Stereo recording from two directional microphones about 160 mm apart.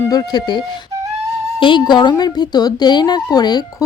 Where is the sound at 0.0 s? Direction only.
20° left (ahead or behind).